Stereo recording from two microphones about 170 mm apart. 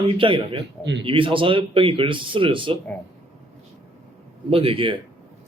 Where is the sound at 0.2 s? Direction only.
30° right (ahead or behind).